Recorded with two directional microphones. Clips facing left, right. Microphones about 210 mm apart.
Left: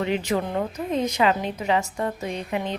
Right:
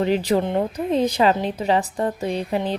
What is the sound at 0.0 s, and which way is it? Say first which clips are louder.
A woman's voice: right 5 dB; 35° right (ahead or behind).